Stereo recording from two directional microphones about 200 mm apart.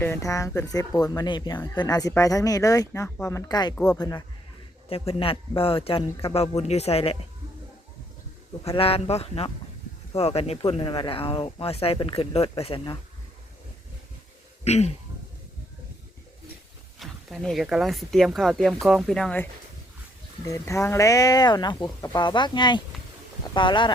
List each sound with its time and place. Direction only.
0.0 s speech: 15° left (ahead or behind); by 7.3 s 30° left (ahead or behind)
8.6 s speech: 30° left (ahead or behind)
14.6 s speech: 30° left (ahead or behind)
17.0 s speech: centre (ahead or behind)
20.4 s speech: 15° left (ahead or behind)